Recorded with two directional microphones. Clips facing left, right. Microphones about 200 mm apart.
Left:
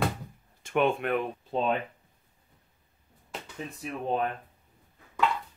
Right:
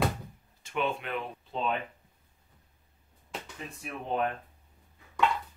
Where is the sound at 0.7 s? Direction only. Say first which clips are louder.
Left 6 dB; 55° left (ahead or behind).